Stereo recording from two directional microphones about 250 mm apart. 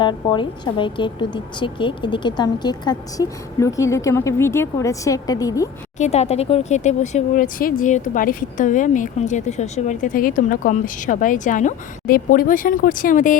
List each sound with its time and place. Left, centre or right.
0.0 s a woman's voice: centre
6.0 s speech: left